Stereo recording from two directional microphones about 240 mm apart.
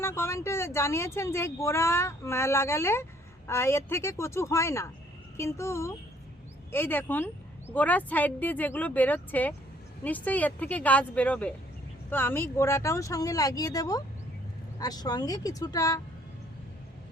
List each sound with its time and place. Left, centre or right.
0.0 s speech: centre